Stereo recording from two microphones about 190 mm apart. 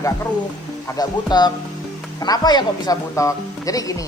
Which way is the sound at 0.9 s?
20° left (ahead or behind).